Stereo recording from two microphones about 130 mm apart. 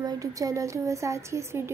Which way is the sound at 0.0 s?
25° right (ahead or behind).